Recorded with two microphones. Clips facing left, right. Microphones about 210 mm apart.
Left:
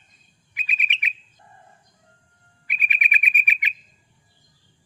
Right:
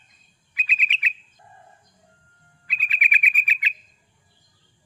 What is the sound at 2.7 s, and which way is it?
Bird, 20° left (ahead or behind).